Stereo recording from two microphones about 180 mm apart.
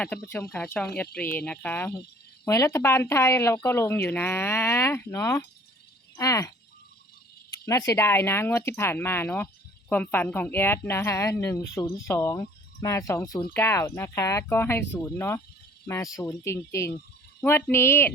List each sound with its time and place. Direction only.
0.0 s speech: 5° left (ahead or behind)
7.6 s speech: 20° left (ahead or behind)